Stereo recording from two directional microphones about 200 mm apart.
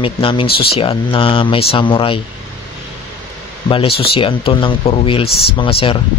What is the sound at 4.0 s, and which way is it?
Speech, 25° left (ahead or behind).